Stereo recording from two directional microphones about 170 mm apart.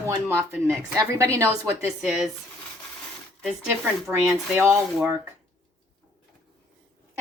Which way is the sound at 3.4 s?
Centre (ahead or behind).